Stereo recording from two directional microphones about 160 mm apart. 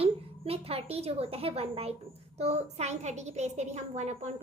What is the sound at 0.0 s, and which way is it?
A woman's voice, 40° right (ahead or behind).